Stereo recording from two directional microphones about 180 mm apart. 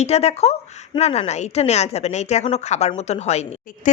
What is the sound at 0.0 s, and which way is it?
A woman's voice, 35° left (ahead or behind).